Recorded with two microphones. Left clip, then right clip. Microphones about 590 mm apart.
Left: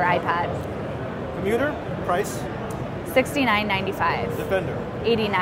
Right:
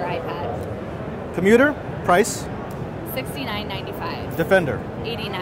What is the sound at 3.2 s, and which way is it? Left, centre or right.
Speech, left.